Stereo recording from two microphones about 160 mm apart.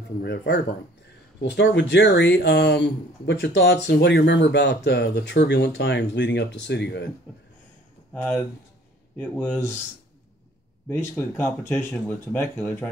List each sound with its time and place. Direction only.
0.2 s speech: 90° left
9.2 s speech: 10° left (ahead or behind)
10.9 s speech: 15° left (ahead or behind)